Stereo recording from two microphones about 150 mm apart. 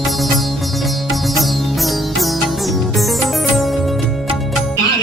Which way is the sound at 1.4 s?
Centre (ahead or behind).